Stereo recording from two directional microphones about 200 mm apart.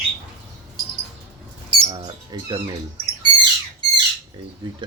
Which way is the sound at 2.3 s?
20° right (ahead or behind).